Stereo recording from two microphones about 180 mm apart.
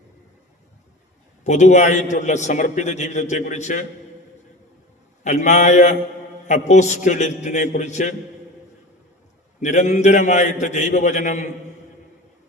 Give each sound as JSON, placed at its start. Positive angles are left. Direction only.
{"t": 1.5, "sound": "a man's voice", "side_deg": 40}
{"t": 5.2, "sound": "a man's voice", "side_deg": 40}
{"t": 9.6, "sound": "a man's voice", "side_deg": 40}